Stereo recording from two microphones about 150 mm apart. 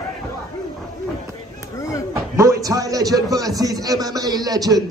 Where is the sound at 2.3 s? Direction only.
20° right (ahead or behind).